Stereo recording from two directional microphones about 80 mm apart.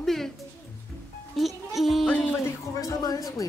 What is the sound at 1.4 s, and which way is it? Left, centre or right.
Music, centre.